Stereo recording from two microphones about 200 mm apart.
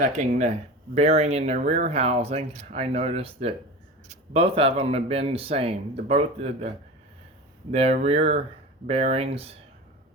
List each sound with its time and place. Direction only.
0.0 s speech: 35° right (ahead or behind)